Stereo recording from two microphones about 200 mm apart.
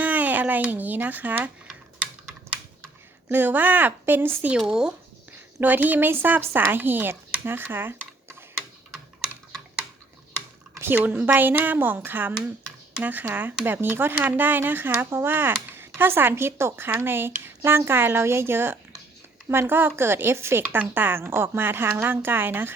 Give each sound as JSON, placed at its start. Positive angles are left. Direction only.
{"t": 0.0, "sound": "a sound", "side_deg": -10}
{"t": 3.2, "sound": "speech", "side_deg": -10}
{"t": 9.2, "sound": "typing", "side_deg": -5}
{"t": 10.8, "sound": "speech", "side_deg": -10}